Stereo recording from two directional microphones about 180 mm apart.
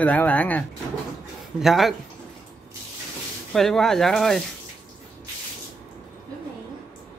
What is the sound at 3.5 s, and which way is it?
Speech, centre (ahead or behind).